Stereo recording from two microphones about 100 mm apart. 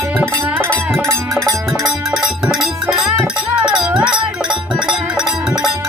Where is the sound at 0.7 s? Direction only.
10° left (ahead or behind).